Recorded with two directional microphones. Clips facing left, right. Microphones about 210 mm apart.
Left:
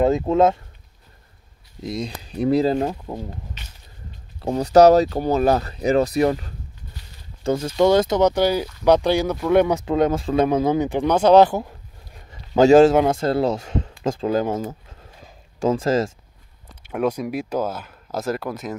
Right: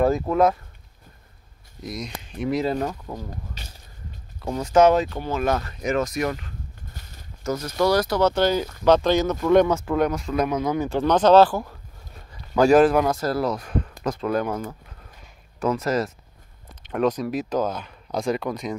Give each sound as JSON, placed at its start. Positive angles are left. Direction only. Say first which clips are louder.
{"t": 0.0, "sound": "speech", "louder": "left 2 dB", "side_deg": 25}
{"t": 1.8, "sound": "speech", "louder": "left 5 dB", "side_deg": 30}
{"t": 4.4, "sound": "speech", "louder": "left 4 dB", "side_deg": 35}
{"t": 6.9, "sound": "a sound", "louder": "even", "side_deg": -50}
{"t": 7.4, "sound": "speech", "louder": "left 4 dB", "side_deg": 25}
{"t": 10.9, "sound": "a man's voice", "louder": "right 1 dB", "side_deg": 10}
{"t": 15.2, "sound": "a sound", "louder": "left 3 dB", "side_deg": 30}
{"t": 16.8, "sound": "speech", "louder": "even", "side_deg": 10}